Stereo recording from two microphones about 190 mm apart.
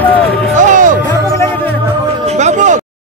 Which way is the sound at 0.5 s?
40° right (ahead or behind).